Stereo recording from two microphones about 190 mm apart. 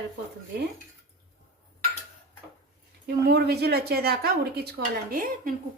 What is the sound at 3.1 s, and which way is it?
A woman's voice, 55° right (ahead or behind).